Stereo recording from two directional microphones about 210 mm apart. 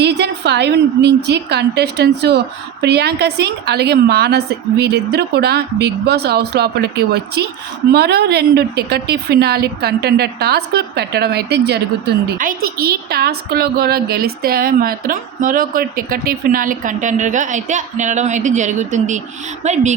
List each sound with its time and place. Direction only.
0.0 s a woman's voice: 55° right (ahead or behind); by 19.9 s 35° right (ahead or behind)